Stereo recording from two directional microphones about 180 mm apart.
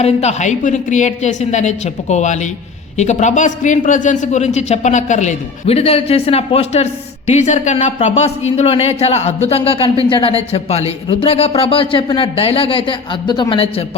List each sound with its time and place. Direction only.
0.0 s a man's voice: 35° left (ahead or behind)